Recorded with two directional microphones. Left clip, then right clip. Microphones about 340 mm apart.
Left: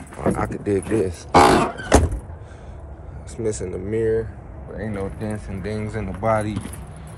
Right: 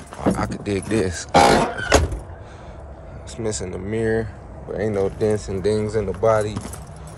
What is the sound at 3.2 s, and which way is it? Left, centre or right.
Speech, centre.